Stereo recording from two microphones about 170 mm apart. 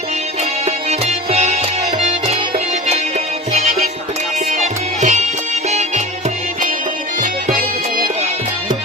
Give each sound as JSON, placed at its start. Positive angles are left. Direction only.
{"t": 0.6, "sound": "music", "side_deg": -40}
{"t": 4.5, "sound": "music", "side_deg": -45}
{"t": 7.2, "sound": "music", "side_deg": -50}